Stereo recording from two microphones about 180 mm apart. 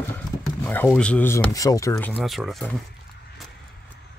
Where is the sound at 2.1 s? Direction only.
Centre (ahead or behind).